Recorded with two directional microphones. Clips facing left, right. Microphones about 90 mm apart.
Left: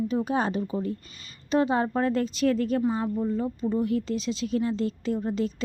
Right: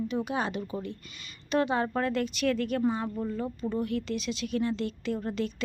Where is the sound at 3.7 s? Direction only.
30° left (ahead or behind).